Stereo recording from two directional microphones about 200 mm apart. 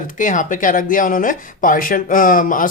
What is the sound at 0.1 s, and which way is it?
Speech, 40° left (ahead or behind).